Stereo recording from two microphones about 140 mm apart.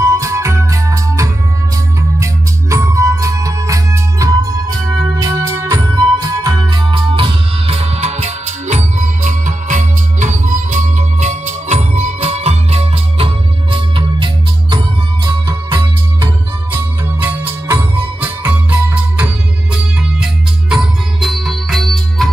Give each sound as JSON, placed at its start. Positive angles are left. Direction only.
{"t": 0.0, "sound": "music", "side_deg": -20}
{"t": 16.7, "sound": "music", "side_deg": -15}